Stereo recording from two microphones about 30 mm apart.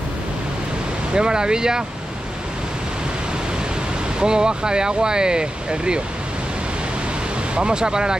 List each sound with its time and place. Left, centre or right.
1.1 s speech: right
4.2 s speech: right
7.5 s speech: right